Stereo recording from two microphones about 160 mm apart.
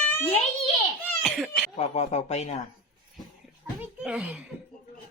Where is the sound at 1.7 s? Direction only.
45° left (ahead or behind).